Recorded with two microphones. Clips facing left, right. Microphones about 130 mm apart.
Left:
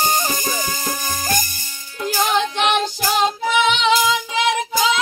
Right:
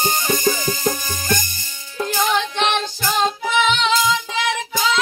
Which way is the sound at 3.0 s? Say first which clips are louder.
Left 1 dB; 10° left (ahead or behind).